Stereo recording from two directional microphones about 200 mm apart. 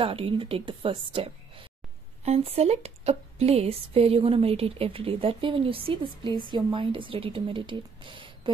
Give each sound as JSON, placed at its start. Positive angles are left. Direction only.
{"t": 0.0, "sound": "speech", "side_deg": -25}